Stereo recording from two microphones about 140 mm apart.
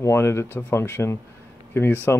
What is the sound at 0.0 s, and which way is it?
Speech, 20° left (ahead or behind).